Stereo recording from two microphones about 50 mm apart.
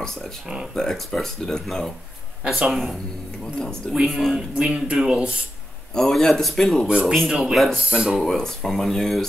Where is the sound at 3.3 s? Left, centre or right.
Centre.